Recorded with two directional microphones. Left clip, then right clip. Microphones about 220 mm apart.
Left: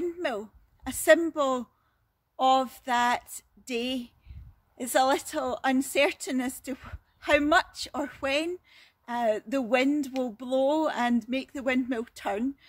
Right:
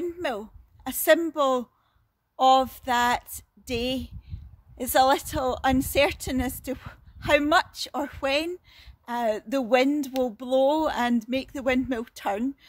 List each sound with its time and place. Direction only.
0.0 s a woman's voice: 20° right (ahead or behind)